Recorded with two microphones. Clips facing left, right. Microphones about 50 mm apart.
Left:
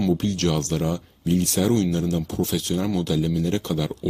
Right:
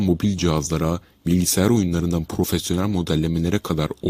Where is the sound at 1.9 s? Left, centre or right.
Right.